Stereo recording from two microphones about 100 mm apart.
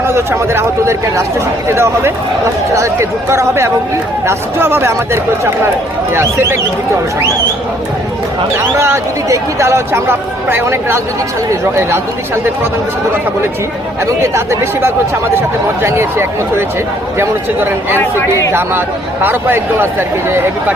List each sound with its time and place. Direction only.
0.1 s speech: 25° right (ahead or behind)
8.8 s speech: 30° right (ahead or behind)
14.2 s speech: 30° right (ahead or behind)
18.2 s speech: 30° left (ahead or behind)
19.2 s speech: 20° right (ahead or behind)